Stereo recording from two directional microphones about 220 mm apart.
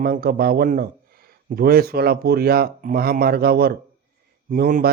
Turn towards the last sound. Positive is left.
turn(degrees=-40)  # may be behind; listen again after turning